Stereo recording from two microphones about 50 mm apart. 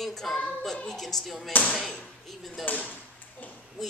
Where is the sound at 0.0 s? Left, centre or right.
Centre.